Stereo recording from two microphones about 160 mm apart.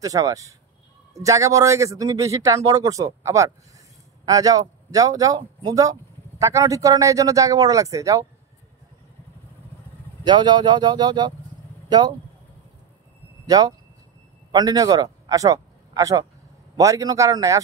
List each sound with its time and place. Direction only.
0.0 s a man's voice: 20° right (ahead or behind)
10.2 s a man's voice: 25° right (ahead or behind)
13.5 s a man's voice: 25° right (ahead or behind)